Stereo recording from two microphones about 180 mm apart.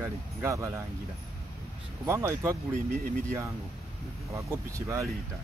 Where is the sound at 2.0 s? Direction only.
15° right (ahead or behind).